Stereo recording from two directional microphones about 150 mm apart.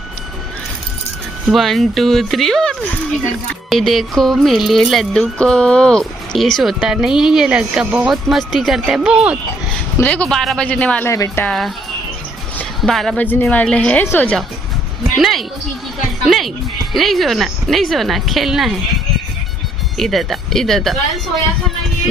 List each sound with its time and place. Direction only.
1.5 s music: centre (ahead or behind)
10.0 s a woman's voice: 10° left (ahead or behind)
11.1 s speech: 20° left (ahead or behind)
11.4 s music: centre (ahead or behind)
12.5 s a woman's voice: 5° left (ahead or behind)
15.2 s music: centre (ahead or behind)
20.0 s music: centre (ahead or behind)